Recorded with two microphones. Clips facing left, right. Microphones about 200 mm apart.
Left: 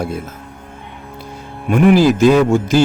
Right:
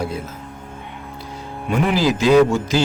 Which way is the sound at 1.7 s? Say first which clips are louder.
Left 7 dB; 50° left (ahead or behind).